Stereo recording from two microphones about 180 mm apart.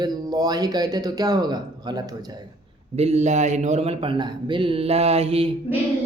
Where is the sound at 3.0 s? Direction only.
35° right (ahead or behind).